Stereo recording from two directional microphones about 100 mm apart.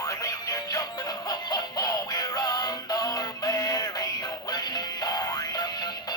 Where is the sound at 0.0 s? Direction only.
35° left (ahead or behind).